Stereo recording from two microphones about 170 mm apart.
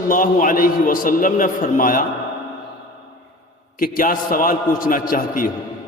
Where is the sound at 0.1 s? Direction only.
55° left (ahead or behind).